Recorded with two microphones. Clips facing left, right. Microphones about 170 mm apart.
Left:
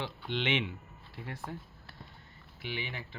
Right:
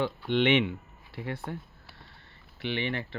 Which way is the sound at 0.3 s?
60° right (ahead or behind).